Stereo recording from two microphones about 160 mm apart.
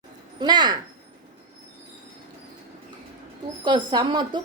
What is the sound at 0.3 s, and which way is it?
Speech, 25° right (ahead or behind).